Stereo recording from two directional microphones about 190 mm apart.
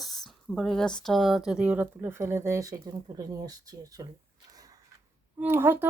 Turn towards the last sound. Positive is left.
turn(degrees=-10)  # may be behind; listen again after turning